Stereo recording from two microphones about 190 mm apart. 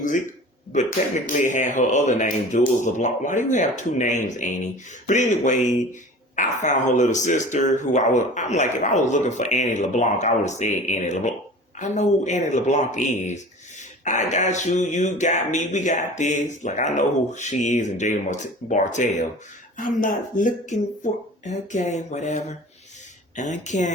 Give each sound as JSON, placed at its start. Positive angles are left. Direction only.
{"t": 0.7, "sound": "speech", "side_deg": 40}